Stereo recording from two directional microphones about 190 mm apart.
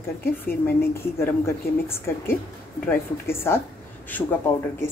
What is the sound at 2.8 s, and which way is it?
Speech, 10° left (ahead or behind).